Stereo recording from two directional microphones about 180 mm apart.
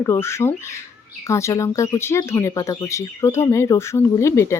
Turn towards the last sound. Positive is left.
turn(degrees=15)  # may be behind; listen again after turning